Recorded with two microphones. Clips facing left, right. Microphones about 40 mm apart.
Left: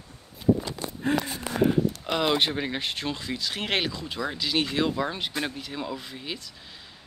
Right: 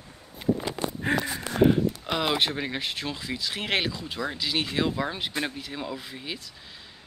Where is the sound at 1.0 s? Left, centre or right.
Right.